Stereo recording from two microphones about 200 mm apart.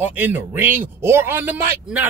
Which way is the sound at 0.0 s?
10° right (ahead or behind).